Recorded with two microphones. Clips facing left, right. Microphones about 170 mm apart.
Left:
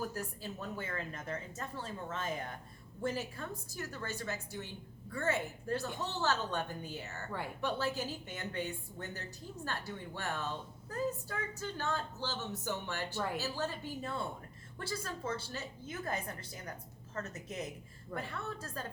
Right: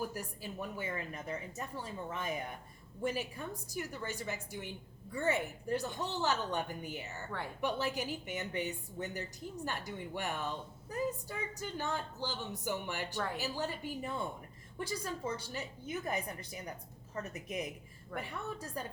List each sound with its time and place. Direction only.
0.0 s a woman's voice: 15° right (ahead or behind)